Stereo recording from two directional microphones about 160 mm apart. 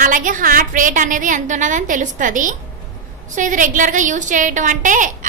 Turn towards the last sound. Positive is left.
turn(degrees=-55)  # may be behind; listen again after turning